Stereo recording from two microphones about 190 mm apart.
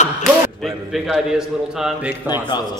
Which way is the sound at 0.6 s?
Centre (ahead or behind).